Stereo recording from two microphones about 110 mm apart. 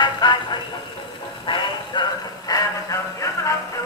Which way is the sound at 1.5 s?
50° left (ahead or behind).